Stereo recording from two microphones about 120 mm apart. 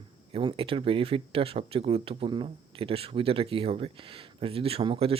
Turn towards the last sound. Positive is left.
turn(degrees=-50)  # may be behind; listen again after turning